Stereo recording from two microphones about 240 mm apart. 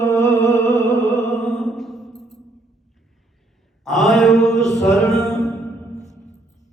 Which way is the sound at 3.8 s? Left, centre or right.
Centre.